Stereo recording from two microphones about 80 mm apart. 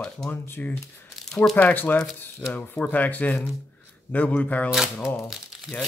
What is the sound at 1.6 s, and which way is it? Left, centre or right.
Speech, left.